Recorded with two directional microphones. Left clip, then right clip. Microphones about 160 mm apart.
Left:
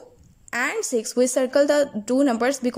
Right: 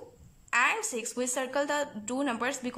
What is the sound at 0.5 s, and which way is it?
A woman's voice, 35° left (ahead or behind).